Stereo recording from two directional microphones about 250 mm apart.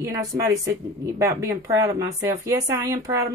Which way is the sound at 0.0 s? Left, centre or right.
Centre.